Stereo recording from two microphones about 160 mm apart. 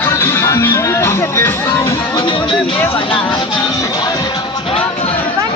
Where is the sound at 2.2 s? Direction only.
30° left (ahead or behind).